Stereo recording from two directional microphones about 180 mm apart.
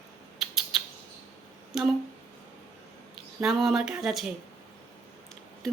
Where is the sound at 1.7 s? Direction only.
Centre (ahead or behind).